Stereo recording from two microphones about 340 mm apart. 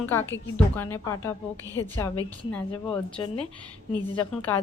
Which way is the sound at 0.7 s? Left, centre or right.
Centre.